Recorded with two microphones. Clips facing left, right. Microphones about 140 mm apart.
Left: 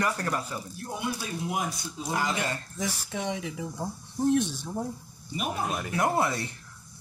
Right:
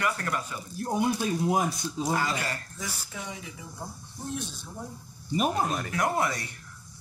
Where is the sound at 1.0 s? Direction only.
40° right (ahead or behind).